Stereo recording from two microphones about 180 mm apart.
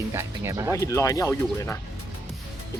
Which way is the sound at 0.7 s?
15° left (ahead or behind).